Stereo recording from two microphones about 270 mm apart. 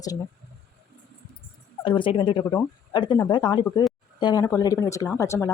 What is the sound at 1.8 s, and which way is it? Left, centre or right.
Speech, centre.